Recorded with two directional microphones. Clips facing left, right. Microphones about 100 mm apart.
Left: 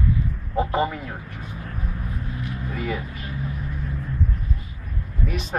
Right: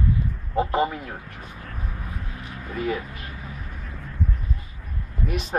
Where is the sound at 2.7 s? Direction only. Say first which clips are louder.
Right 3 dB; 40° right (ahead or behind).